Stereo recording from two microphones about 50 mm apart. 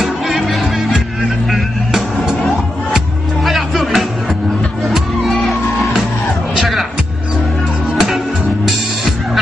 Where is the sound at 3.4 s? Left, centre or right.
Centre.